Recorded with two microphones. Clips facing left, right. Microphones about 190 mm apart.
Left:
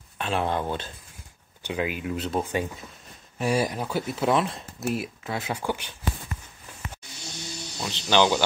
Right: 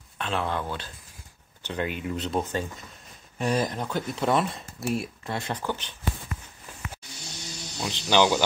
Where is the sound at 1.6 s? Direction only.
5° left (ahead or behind).